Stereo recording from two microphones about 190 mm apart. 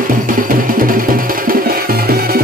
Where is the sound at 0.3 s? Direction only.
45° right (ahead or behind).